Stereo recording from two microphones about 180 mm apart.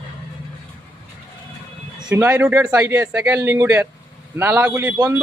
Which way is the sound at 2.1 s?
10° right (ahead or behind).